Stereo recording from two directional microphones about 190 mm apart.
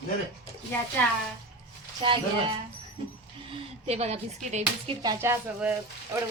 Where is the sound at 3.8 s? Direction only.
35° right (ahead or behind).